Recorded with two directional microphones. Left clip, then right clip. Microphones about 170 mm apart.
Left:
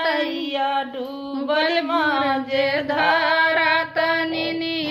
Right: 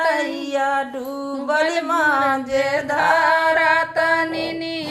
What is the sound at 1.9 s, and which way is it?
Music, 40° right (ahead or behind).